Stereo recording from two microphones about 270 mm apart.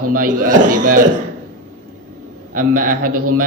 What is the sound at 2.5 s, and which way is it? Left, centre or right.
Speech, right.